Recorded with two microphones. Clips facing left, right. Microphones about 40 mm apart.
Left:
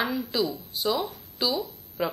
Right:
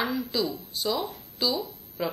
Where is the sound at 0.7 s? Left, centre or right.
Centre.